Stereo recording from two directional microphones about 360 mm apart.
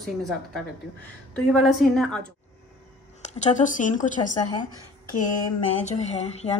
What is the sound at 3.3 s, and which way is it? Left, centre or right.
Speech, centre.